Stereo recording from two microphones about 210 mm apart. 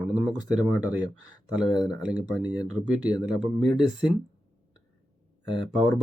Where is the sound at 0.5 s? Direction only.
5° right (ahead or behind).